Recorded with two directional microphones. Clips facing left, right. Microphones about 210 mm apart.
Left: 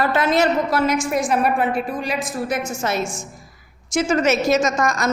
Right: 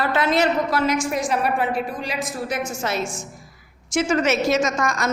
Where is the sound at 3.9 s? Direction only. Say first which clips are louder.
Left 2 dB; 40° left (ahead or behind).